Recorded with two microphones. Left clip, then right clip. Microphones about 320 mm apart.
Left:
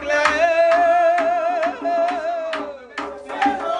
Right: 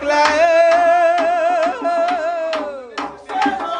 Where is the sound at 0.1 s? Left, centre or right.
Centre.